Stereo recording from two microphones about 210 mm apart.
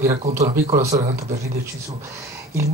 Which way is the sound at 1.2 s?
45° right (ahead or behind).